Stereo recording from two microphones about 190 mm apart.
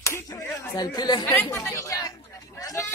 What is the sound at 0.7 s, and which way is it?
Chatter, 20° left (ahead or behind).